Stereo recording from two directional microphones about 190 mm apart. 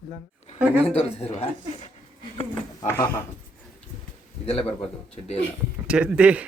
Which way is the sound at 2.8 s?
10° left (ahead or behind).